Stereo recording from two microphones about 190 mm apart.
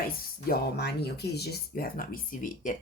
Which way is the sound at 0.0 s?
55° left (ahead or behind).